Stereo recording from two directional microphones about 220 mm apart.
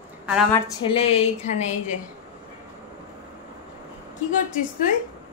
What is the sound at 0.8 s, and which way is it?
A woman's voice, 25° left (ahead or behind).